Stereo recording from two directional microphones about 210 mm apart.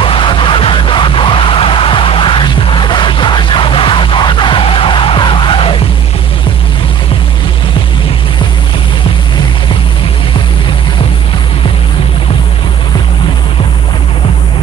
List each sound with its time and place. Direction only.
0.0 s music: 25° left (ahead or behind)